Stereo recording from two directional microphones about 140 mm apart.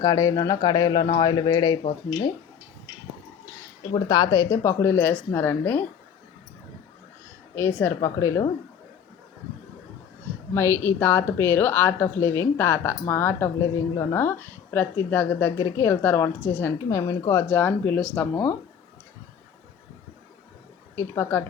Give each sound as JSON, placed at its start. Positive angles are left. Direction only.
{"t": 0.0, "sound": "speech", "side_deg": 25}
{"t": 3.9, "sound": "a woman's voice", "side_deg": 25}
{"t": 7.5, "sound": "a woman's voice", "side_deg": 15}
{"t": 10.5, "sound": "a woman's voice", "side_deg": 20}
{"t": 20.9, "sound": "a woman's voice", "side_deg": 20}